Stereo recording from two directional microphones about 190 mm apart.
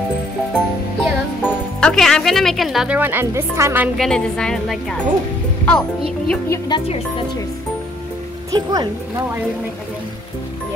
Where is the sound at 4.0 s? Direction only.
5° left (ahead or behind).